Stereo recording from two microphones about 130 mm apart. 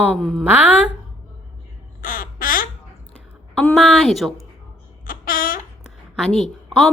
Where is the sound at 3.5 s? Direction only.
5° left (ahead or behind).